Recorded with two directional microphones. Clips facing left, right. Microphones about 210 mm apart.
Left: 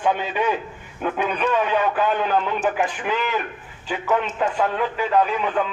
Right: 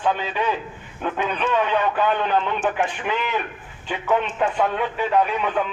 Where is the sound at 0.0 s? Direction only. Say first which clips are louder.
Left 1 dB; 15° left (ahead or behind).